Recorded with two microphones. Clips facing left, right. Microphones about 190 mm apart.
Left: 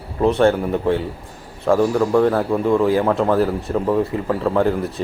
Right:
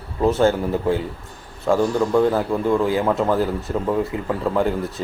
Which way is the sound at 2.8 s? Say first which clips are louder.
Left 3 dB; 30° left (ahead or behind).